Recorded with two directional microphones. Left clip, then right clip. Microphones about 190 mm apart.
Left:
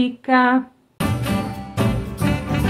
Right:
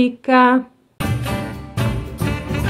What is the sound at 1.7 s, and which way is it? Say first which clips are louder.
Music: left 2 dB; 10° right (ahead or behind).